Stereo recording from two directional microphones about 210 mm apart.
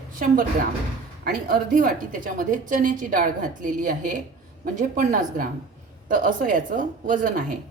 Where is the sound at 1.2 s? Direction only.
45° right (ahead or behind).